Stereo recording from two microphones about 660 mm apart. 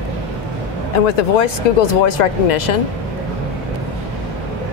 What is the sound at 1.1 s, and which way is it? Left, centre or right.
Speech, left.